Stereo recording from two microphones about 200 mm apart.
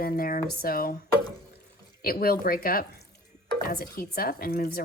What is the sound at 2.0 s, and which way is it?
Speech, 50° left (ahead or behind).